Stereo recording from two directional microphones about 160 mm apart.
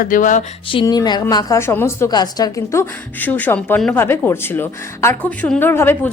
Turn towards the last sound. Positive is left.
turn(degrees=15)  # may be behind; listen again after turning